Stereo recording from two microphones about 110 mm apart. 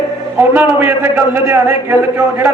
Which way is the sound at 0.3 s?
20° right (ahead or behind).